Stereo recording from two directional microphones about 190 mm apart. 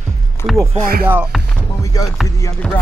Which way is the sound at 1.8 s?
20° left (ahead or behind).